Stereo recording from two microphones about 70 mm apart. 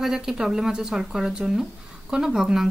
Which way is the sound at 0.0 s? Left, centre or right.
Centre.